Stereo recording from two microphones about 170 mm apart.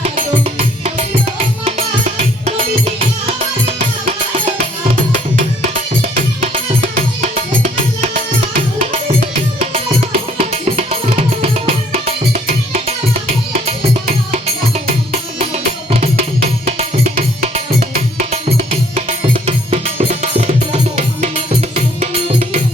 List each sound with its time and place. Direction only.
0.2 s music: 45° right (ahead or behind)
4.5 s music: 50° right (ahead or behind)
10.3 s music: 40° right (ahead or behind)
11.9 s music: 45° right (ahead or behind)
17.5 s music: 45° right (ahead or behind)